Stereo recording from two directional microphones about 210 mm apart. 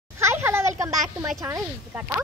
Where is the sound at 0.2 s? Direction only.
10° right (ahead or behind).